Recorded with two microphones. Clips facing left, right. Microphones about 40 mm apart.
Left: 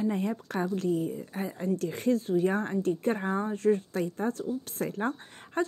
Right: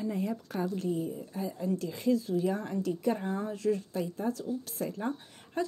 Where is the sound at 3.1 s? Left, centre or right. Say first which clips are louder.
Left 4 dB; left.